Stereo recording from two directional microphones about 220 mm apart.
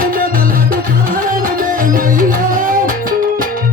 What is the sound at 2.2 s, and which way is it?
Music, 40° right (ahead or behind).